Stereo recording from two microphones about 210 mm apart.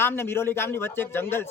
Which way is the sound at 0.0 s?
10° left (ahead or behind).